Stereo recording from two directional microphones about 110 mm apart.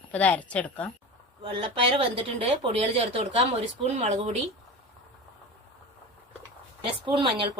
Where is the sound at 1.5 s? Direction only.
60° right (ahead or behind).